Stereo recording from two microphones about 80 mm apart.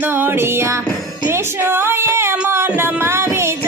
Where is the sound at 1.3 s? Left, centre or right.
Right.